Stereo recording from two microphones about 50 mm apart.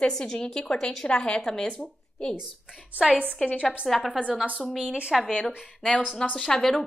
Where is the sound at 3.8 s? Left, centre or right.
Centre.